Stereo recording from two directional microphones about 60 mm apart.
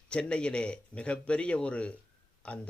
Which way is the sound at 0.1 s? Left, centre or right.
Centre.